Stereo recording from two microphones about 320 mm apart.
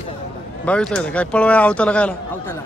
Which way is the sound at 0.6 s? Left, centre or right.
Centre.